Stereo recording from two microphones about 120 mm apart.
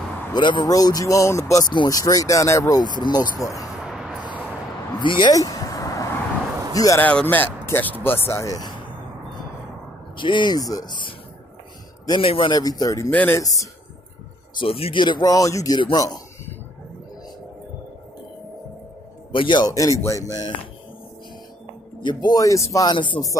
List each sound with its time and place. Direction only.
0.3 s speech: 40° left (ahead or behind)
3.8 s vehicle: 5° right (ahead or behind)
5.0 s speech: 40° left (ahead or behind)
5.3 s vehicle: 30° left (ahead or behind)
6.7 s a man's voice: 30° left (ahead or behind)
7.0 s speech: 10° left (ahead or behind); by 8.8 s 35° left (ahead or behind)
10.1 s speech: 45° left (ahead or behind)
12.1 s speech: 45° left (ahead or behind)
12.5 s speech: 30° left (ahead or behind)
13.1 s speech: 15° left (ahead or behind)
14.6 s speech: 50° left (ahead or behind)
19.3 s speech: 40° left (ahead or behind)
22.0 s speech: 30° left (ahead or behind)
22.9 s speech: 40° left (ahead or behind)